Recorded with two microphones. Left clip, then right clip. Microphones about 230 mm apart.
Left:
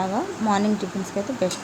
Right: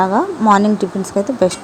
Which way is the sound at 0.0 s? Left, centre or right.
Right.